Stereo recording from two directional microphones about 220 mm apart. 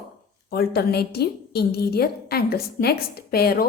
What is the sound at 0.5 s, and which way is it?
A woman's voice, 45° left (ahead or behind).